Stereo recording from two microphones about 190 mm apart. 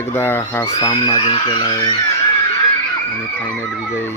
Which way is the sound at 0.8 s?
25° left (ahead or behind).